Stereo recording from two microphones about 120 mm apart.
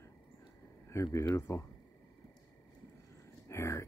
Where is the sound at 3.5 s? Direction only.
25° left (ahead or behind).